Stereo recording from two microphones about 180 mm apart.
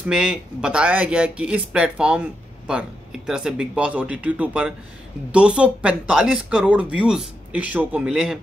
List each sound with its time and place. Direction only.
0.0 s speech: 5° right (ahead or behind)